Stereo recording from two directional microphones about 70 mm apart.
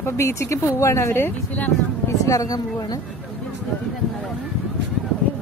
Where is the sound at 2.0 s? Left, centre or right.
Left.